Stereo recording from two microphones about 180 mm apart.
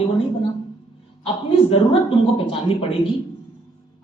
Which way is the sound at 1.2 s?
30° left (ahead or behind).